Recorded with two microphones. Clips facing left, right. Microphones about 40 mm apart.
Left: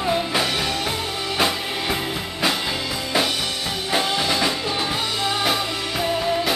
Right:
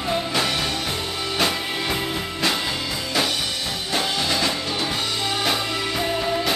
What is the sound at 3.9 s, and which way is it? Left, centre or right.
Music, centre.